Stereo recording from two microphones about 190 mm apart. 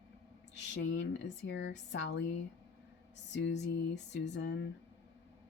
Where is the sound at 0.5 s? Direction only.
70° left (ahead or behind).